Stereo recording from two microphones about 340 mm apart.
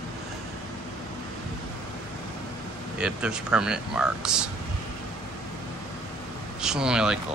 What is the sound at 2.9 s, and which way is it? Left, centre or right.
Speech, centre.